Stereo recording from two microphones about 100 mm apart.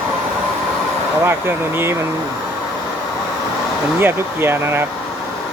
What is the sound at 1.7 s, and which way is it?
Speech, 25° right (ahead or behind).